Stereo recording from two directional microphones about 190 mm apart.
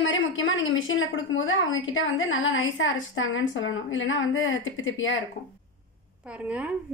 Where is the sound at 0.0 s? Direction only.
85° left.